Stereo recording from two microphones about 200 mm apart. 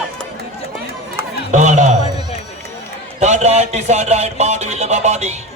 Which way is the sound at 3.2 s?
35° right (ahead or behind).